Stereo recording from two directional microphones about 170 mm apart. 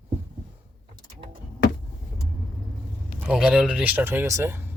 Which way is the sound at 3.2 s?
5° right (ahead or behind).